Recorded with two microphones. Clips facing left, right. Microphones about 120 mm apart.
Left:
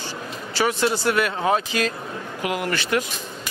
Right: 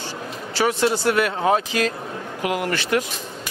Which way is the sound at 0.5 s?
35° right (ahead or behind).